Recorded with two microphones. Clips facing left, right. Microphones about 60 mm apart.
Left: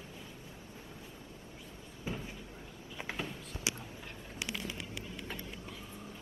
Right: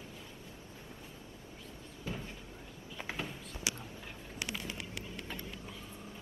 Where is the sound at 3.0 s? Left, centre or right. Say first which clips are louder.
Left 1 dB; centre.